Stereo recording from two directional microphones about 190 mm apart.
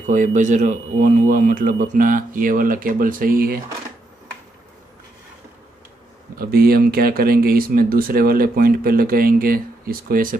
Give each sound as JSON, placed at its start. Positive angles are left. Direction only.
{"t": 0.0, "sound": "speech", "side_deg": -40}
{"t": 6.3, "sound": "speech", "side_deg": -50}